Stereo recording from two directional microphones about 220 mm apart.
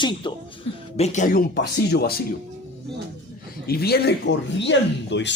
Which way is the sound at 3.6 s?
45° left (ahead or behind).